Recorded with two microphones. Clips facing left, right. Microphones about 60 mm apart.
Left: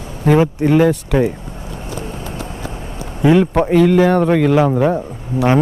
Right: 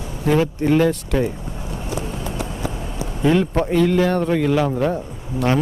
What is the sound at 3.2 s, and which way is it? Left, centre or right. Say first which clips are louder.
Speech: left 5 dB; centre.